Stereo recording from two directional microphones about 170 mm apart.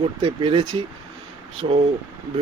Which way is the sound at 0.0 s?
30° right (ahead or behind).